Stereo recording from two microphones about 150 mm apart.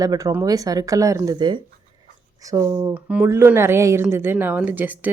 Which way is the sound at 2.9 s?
10° right (ahead or behind).